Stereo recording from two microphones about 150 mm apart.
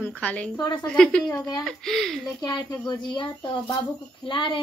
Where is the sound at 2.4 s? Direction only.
30° left (ahead or behind).